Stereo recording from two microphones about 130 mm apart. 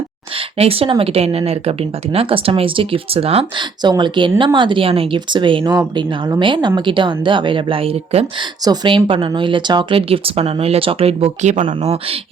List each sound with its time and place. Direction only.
0.3 s a woman's voice: 50° right (ahead or behind)
8.6 s speech: 35° right (ahead or behind); by 12.2 s 50° right (ahead or behind)